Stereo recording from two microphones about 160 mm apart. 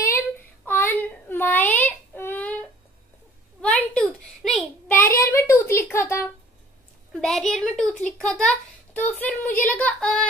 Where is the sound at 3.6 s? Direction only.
5° left (ahead or behind).